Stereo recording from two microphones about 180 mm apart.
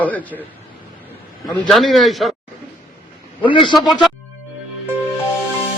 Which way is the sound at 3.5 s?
25° left (ahead or behind).